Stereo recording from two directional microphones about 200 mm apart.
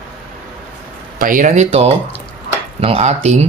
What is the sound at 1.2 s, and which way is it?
Speech, 40° right (ahead or behind).